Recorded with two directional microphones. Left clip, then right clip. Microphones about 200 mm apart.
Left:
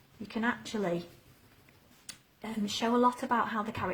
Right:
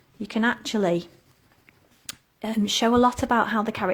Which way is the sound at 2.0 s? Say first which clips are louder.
Right 10 dB; 40° right (ahead or behind).